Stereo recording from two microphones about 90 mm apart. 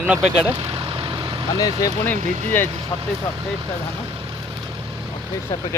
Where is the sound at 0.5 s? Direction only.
70° right (ahead or behind); by 1.5 s 50° right (ahead or behind).